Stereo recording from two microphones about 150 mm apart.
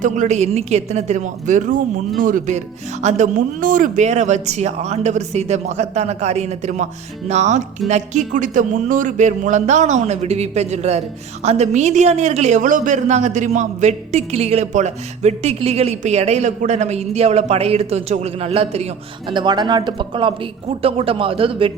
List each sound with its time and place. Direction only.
0.0 s a man's voice: 55° right (ahead or behind)
3.0 s a man's voice: 50° right (ahead or behind)
19.3 s speech: 30° right (ahead or behind)